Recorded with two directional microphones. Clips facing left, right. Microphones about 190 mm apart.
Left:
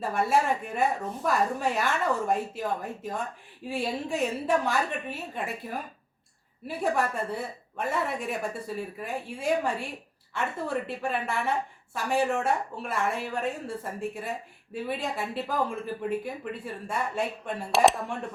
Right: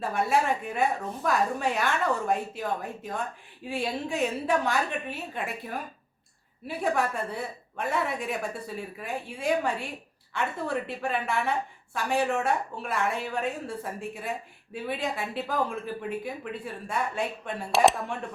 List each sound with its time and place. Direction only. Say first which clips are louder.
0.0 s a woman's voice: even; centre (ahead or behind)